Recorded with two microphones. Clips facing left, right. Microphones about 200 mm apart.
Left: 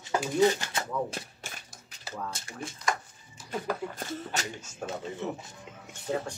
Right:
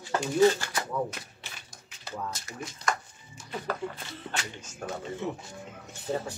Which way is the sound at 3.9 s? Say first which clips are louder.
Left 3 dB; 45° left (ahead or behind).